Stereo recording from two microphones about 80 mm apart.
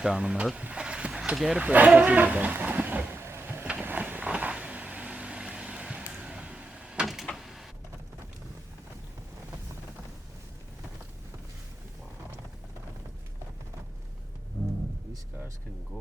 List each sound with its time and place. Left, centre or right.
0.0 s speech: centre
3.8 s vehicle: right
7.3 s printer: centre